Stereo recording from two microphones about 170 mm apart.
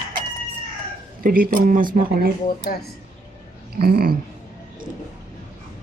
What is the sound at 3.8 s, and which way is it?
Speech, 60° right (ahead or behind).